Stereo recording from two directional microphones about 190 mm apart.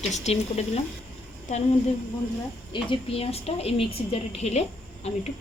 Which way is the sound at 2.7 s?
30° left (ahead or behind).